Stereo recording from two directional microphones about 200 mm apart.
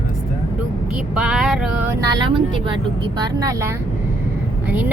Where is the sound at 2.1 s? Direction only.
25° right (ahead or behind).